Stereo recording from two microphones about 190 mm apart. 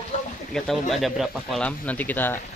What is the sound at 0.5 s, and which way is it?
Speech, centre (ahead or behind).